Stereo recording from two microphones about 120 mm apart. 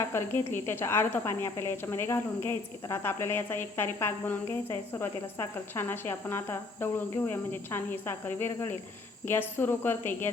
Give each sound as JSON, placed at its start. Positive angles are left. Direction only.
{"t": 0.0, "sound": "a woman's voice", "side_deg": 20}